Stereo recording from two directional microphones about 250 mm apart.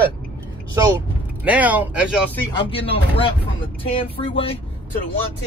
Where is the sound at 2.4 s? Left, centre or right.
Centre.